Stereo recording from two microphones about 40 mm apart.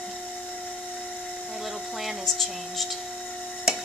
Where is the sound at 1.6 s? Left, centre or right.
Centre.